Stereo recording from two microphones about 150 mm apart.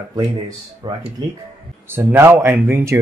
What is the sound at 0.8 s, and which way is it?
Speech, 30° right (ahead or behind).